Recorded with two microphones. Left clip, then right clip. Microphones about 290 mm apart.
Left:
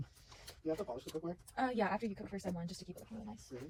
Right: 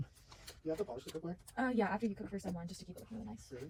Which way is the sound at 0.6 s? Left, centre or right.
Left.